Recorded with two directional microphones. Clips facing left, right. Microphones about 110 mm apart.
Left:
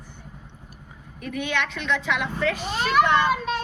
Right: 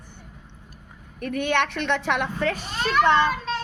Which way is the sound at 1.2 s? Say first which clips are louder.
Right 4 dB; 55° right (ahead or behind).